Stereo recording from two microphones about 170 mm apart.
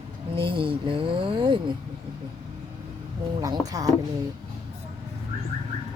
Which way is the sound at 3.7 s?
20° right (ahead or behind).